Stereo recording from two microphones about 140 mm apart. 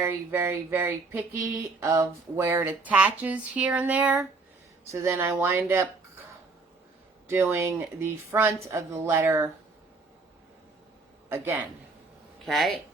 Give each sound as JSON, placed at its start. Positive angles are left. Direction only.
{"t": 0.0, "sound": "speech", "side_deg": -15}
{"t": 4.9, "sound": "speech", "side_deg": -20}
{"t": 7.3, "sound": "speech", "side_deg": -15}
{"t": 11.3, "sound": "speech", "side_deg": -15}
{"t": 12.5, "sound": "speech", "side_deg": 0}